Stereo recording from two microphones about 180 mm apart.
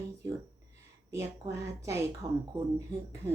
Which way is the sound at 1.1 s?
15° right (ahead or behind).